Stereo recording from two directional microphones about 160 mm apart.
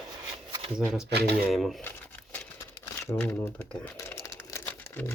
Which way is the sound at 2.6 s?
15° left (ahead or behind).